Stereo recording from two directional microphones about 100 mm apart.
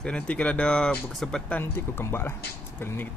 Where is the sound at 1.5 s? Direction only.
25° left (ahead or behind).